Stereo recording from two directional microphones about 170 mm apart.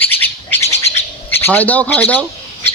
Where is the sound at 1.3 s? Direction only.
10° left (ahead or behind).